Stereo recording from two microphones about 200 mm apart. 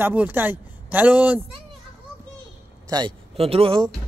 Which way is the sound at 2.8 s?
20° right (ahead or behind).